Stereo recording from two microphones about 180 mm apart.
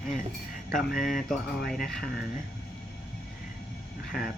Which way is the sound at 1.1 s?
Centre (ahead or behind).